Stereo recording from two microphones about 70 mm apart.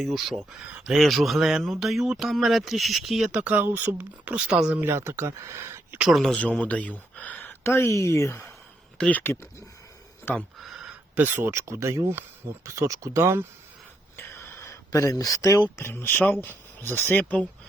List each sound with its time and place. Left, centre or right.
0.0 s speech: centre
3.3 s speech: right
4.3 s speech: centre
4.8 s speech: right
6.2 s speech: centre; by 8.5 s left
9.0 s speech: left
10.6 s a sound: centre
11.1 s speech: right
11.5 s speech: right
14.2 s a sound: left
15.7 s speech: left